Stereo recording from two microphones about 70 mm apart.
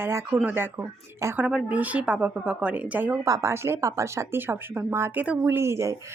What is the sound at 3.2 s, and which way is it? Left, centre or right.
Speech, right.